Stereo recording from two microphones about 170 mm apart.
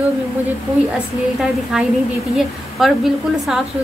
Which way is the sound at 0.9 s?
Centre (ahead or behind).